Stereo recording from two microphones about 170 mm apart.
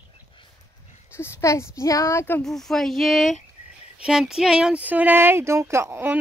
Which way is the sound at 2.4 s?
Centre (ahead or behind).